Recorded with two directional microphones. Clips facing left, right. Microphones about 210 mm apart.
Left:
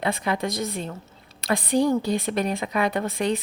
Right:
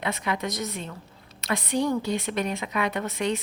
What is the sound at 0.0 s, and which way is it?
A woman's voice, 35° left (ahead or behind).